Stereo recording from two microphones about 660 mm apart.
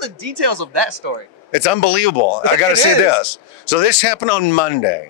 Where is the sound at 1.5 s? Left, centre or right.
Left.